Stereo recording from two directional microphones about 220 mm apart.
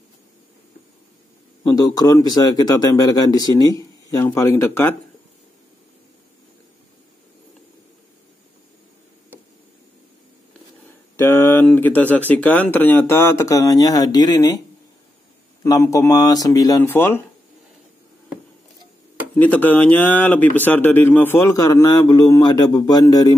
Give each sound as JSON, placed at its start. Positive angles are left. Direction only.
{"t": 1.6, "sound": "speech", "side_deg": 15}
{"t": 11.1, "sound": "speech", "side_deg": 10}
{"t": 15.6, "sound": "speech", "side_deg": 15}
{"t": 19.3, "sound": "speech", "side_deg": 5}